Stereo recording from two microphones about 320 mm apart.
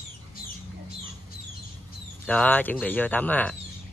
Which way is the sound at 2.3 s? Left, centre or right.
Centre.